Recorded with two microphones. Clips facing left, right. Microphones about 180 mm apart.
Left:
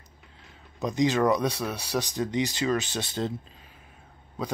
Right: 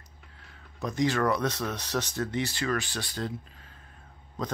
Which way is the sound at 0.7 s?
20° left (ahead or behind).